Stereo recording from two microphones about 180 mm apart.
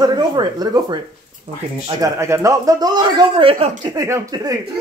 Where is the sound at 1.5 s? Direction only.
35° right (ahead or behind).